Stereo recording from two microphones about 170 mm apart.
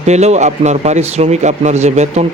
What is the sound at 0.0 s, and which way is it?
Speech, 40° right (ahead or behind).